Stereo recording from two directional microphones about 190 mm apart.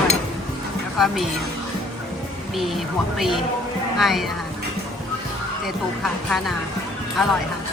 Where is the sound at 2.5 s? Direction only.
Centre (ahead or behind).